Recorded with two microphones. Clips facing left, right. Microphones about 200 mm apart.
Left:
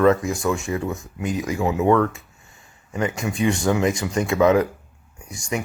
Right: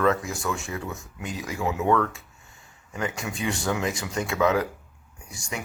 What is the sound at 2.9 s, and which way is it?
Speech, 45° left (ahead or behind).